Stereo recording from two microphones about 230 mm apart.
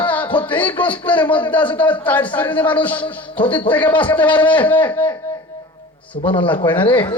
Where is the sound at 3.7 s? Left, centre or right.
Centre.